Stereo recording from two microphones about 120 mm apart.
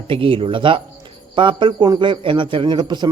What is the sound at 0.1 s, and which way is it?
A man's voice, 50° right (ahead or behind).